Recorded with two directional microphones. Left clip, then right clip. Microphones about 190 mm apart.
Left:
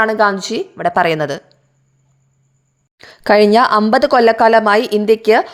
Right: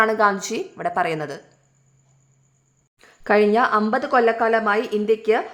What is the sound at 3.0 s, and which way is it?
A woman's voice, 40° left (ahead or behind).